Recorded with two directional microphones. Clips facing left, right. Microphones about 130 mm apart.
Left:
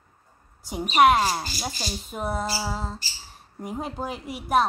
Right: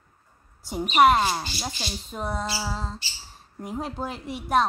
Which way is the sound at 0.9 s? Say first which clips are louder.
Even; centre (ahead or behind).